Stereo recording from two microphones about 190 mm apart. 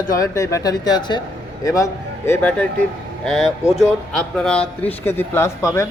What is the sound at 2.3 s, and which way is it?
A man's voice, 10° left (ahead or behind).